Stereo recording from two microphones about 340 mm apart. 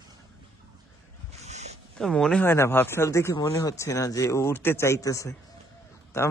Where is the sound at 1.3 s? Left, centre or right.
Centre.